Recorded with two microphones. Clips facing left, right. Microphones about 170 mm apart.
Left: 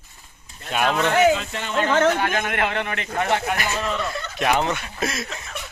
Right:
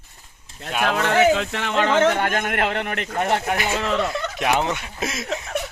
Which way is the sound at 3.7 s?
75° right (ahead or behind).